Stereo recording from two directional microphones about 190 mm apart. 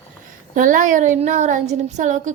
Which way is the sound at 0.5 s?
45° right (ahead or behind).